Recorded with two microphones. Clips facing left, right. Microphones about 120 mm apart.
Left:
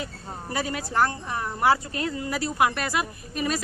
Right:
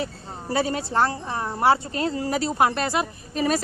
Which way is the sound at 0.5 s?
30° right (ahead or behind).